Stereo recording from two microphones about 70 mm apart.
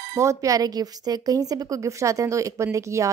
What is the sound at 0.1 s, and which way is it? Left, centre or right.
Speech, right.